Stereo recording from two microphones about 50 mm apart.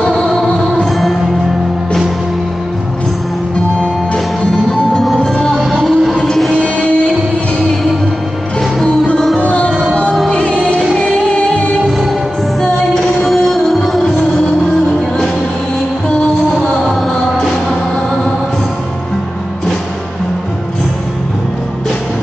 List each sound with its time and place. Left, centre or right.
0.1 s music: centre
0.5 s music: centre
4.5 s music: centre
5.7 s music: centre
6.5 s music: left
8.8 s music: left
13.2 s music: centre